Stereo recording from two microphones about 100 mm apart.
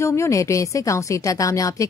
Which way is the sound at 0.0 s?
30° left (ahead or behind).